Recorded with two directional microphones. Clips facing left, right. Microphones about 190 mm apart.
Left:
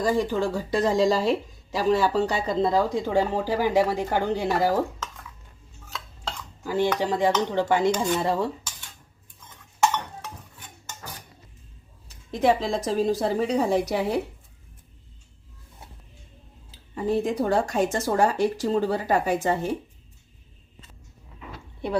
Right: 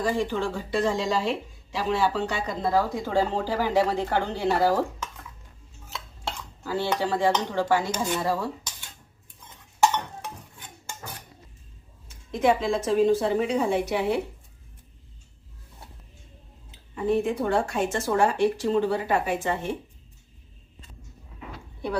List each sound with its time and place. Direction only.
0.0 s speech: 40° left (ahead or behind)
2.6 s speech: 25° left (ahead or behind)
6.7 s speech: 15° left (ahead or behind)
12.0 s speech: 35° left (ahead or behind)
16.7 s speech: 35° left (ahead or behind)